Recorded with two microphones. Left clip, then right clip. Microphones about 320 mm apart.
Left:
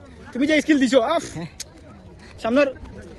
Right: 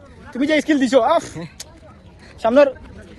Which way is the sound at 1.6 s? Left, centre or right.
Centre.